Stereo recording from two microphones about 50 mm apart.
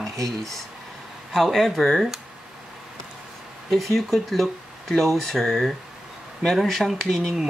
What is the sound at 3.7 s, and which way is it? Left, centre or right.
Speech, centre.